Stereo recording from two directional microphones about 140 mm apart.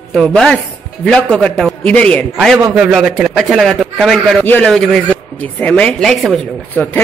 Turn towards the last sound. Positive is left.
turn(degrees=5)  # may be behind; listen again after turning